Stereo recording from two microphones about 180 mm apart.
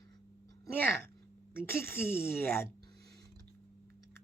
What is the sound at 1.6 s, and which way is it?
A woman's voice, 10° left (ahead or behind).